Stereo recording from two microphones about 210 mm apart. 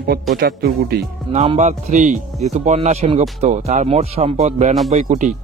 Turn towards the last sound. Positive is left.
turn(degrees=-35)  # may be behind; listen again after turning